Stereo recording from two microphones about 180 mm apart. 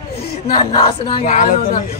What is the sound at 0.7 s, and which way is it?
Speech, 30° left (ahead or behind).